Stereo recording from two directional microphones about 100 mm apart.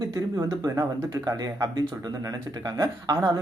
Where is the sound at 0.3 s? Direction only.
35° right (ahead or behind).